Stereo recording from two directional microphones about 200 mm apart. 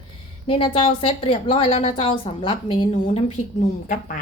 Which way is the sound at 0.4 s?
25° left (ahead or behind).